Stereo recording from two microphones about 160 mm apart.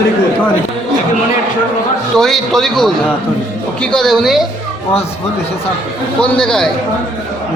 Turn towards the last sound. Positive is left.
turn(degrees=5)  # may be behind; listen again after turning